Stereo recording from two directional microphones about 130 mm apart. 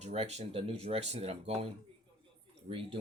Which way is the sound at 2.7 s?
45° right (ahead or behind).